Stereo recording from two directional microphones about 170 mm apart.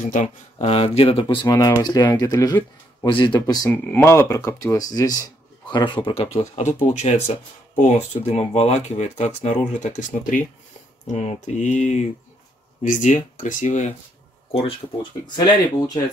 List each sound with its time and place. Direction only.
0.0 s speech: 50° left (ahead or behind)
0.6 s speech: 35° left (ahead or behind)
15.3 s speech: 25° left (ahead or behind)